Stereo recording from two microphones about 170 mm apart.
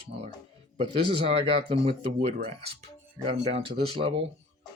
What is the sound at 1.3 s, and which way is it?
Speech, 35° right (ahead or behind).